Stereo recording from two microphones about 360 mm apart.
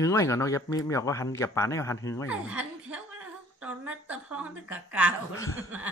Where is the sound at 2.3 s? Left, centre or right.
Centre.